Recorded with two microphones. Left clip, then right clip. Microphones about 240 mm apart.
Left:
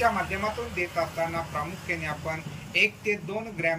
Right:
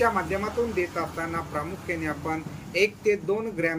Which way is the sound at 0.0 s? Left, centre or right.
Centre.